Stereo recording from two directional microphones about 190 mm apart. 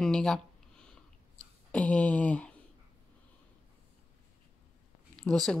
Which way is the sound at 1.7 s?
5° left (ahead or behind).